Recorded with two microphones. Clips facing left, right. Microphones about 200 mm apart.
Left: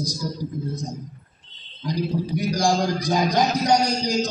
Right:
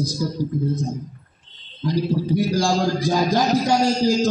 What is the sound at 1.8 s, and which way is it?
A man's voice, 15° left (ahead or behind).